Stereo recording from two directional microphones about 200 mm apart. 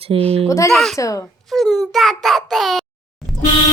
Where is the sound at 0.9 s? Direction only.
15° left (ahead or behind).